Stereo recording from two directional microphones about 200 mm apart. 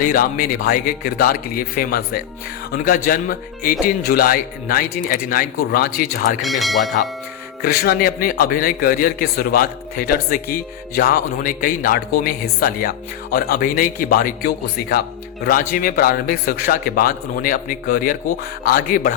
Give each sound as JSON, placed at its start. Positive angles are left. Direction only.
{"t": 0.0, "sound": "a man's voice", "side_deg": 45}
{"t": 6.4, "sound": "speech", "side_deg": 0}
{"t": 7.6, "sound": "a man's voice", "side_deg": 45}